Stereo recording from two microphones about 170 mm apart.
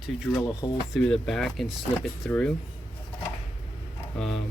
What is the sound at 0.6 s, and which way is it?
Speech, 20° left (ahead or behind).